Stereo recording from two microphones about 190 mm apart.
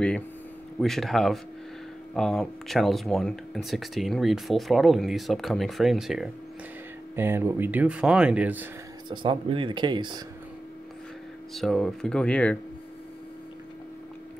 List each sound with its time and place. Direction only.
0.7 s speech: centre (ahead or behind)
9.1 s speech: 25° right (ahead or behind)
11.5 s speech: centre (ahead or behind)